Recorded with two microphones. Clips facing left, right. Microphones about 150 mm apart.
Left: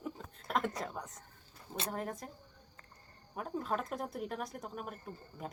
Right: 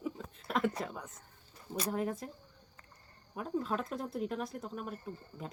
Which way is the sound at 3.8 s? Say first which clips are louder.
Right 1 dB; 50° left (ahead or behind).